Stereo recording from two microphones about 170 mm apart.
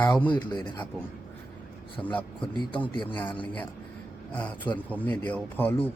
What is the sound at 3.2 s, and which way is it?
Speech, 30° left (ahead or behind).